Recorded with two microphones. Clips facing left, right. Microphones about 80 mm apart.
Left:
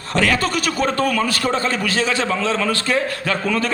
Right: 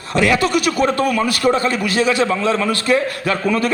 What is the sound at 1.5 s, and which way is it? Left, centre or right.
A man's voice, left.